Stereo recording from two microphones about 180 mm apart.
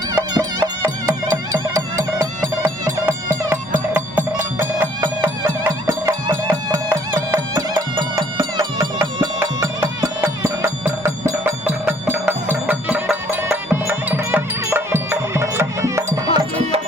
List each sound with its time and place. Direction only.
0.1 s music: 20° right (ahead or behind)